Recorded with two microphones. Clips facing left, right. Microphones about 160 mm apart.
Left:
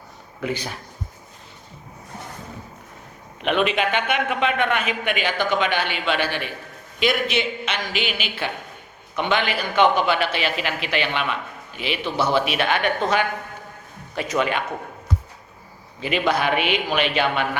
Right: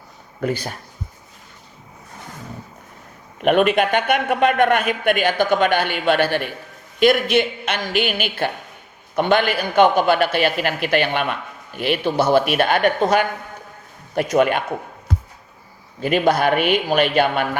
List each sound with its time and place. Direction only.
3.4 s a man's voice: 50° right (ahead or behind)
16.0 s a man's voice: 45° right (ahead or behind)